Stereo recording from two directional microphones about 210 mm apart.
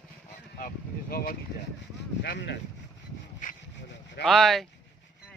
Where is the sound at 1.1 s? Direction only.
45° left (ahead or behind).